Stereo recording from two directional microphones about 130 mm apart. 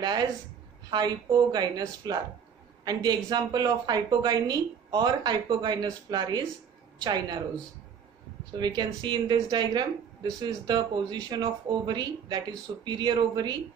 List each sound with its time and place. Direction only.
0.8 s a woman's voice: 30° right (ahead or behind)
8.5 s a woman's voice: 35° right (ahead or behind)